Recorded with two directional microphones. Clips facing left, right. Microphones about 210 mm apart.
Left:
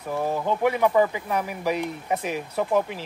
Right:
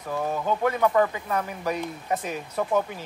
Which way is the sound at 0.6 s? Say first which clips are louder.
Left 2 dB; 10° left (ahead or behind).